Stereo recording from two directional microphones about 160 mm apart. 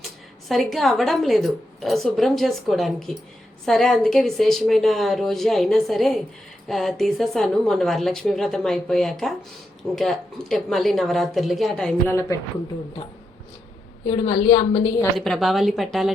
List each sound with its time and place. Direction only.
0.4 s speech: centre (ahead or behind)
12.0 s a woman's voice: 15° left (ahead or behind)
14.1 s a woman's voice: 35° left (ahead or behind)
15.2 s speech: centre (ahead or behind)